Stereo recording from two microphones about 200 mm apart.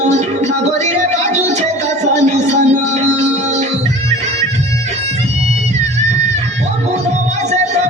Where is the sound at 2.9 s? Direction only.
35° right (ahead or behind).